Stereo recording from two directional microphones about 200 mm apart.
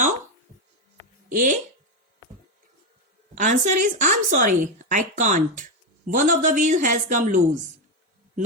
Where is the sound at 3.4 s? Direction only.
40° right (ahead or behind).